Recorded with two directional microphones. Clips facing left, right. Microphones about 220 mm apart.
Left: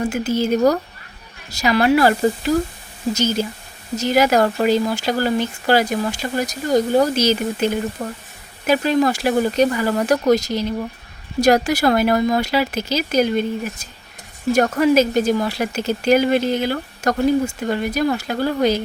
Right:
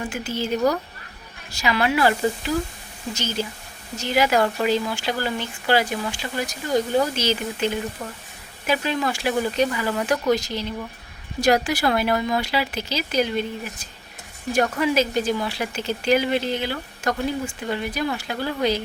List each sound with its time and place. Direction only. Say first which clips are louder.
0.0 s speech: left 8 dB; 40° left (ahead or behind)
14.5 s speech: left 6 dB; 45° left (ahead or behind)